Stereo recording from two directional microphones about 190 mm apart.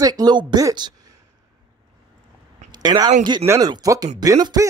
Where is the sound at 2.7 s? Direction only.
20° right (ahead or behind).